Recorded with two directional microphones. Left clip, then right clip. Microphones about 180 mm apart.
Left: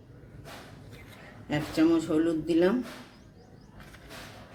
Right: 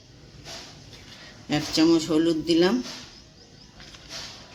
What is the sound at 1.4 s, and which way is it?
A man's voice, 45° right (ahead or behind).